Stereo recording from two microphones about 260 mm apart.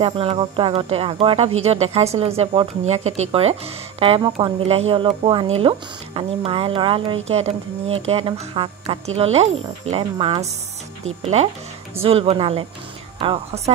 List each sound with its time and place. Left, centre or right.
0.0 s speech: right
12.0 s speech: right